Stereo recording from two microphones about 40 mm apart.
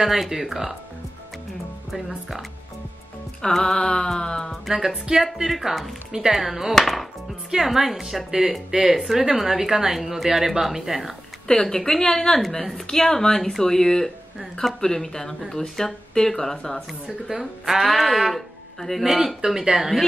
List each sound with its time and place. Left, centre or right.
0.0 s speech: centre
1.9 s speech: centre
3.4 s speech: centre
4.6 s speech: centre
6.7 s speech: centre
7.5 s speech: centre
11.6 s speech: centre
17.3 s speech: centre
19.0 s speech: centre